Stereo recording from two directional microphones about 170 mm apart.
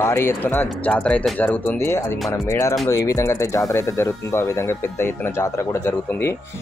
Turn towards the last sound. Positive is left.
turn(degrees=15)  # may be behind; listen again after turning